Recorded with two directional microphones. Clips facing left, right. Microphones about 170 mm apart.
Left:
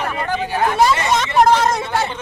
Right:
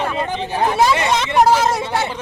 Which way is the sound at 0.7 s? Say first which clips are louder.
Even; 5° right (ahead or behind).